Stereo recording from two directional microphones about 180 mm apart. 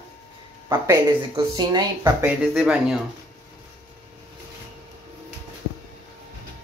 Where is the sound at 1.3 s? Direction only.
25° right (ahead or behind).